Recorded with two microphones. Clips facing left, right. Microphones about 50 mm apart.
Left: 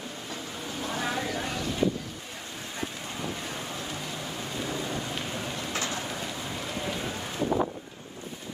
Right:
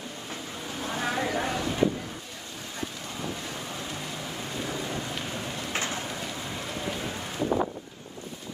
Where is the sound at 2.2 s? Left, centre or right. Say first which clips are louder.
Left 1 dB; centre.